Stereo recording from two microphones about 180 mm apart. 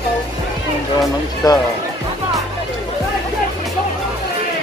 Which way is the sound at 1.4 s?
20° left (ahead or behind).